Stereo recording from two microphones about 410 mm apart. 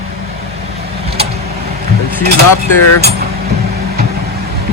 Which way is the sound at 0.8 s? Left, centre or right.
Centre.